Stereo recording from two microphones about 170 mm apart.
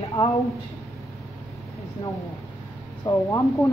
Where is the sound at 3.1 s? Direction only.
20° left (ahead or behind).